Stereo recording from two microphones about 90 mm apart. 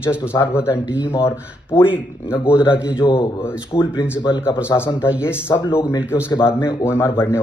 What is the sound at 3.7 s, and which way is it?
Speech, 90° left.